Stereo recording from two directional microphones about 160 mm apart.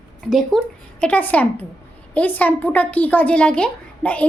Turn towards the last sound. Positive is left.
turn(degrees=10)  # may be behind; listen again after turning